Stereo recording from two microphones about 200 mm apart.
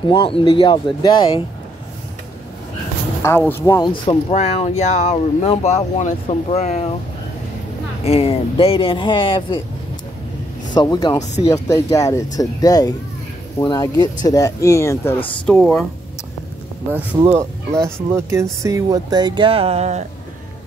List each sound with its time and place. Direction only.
0.1 s speech: 25° left (ahead or behind)
3.2 s speech: 10° left (ahead or behind); by 7.0 s 35° left (ahead or behind)
8.0 s speech: 30° left (ahead or behind)
10.7 s speech: 20° left (ahead or behind); by 15.8 s 5° left (ahead or behind)
17.4 s speech: 15° right (ahead or behind); by 20.1 s 35° right (ahead or behind)